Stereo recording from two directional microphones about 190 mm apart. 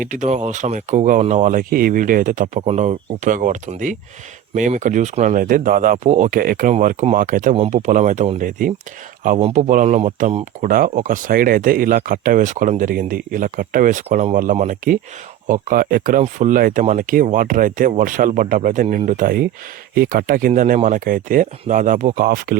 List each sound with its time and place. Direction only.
0.0 s speech: 40° right (ahead or behind)